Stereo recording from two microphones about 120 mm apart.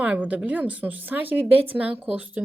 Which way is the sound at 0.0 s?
10° right (ahead or behind).